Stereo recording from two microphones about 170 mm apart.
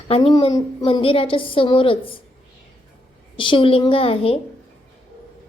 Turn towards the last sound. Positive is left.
turn(degrees=35)  # may be behind; listen again after turning